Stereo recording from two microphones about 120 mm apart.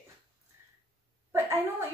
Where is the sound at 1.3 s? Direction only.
25° right (ahead or behind).